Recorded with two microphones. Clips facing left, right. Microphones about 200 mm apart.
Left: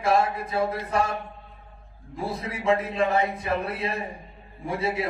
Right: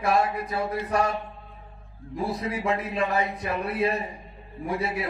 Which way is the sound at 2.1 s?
25° left (ahead or behind).